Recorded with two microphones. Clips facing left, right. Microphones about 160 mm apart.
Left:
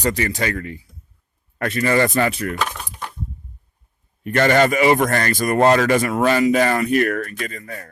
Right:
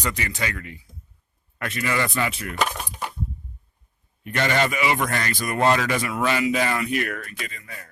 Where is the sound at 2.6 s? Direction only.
10° right (ahead or behind).